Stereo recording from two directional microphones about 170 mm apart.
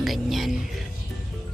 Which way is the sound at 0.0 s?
Centre (ahead or behind).